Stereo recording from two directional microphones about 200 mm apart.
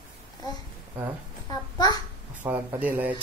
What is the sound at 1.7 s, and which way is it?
Speech, 20° left (ahead or behind).